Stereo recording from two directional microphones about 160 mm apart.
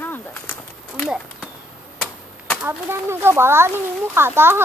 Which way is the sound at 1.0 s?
Centre (ahead or behind).